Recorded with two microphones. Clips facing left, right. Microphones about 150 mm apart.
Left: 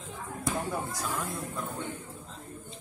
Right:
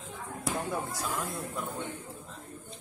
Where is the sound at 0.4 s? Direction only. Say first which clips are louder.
Left 1 dB; 5° right (ahead or behind).